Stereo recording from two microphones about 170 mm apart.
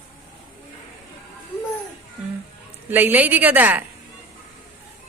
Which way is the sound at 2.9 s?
10° right (ahead or behind).